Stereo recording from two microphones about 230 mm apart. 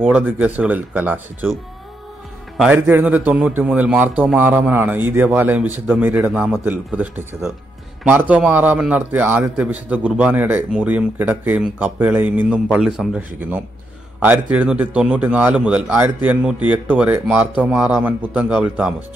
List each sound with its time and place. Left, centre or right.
0.0 s a man's voice: centre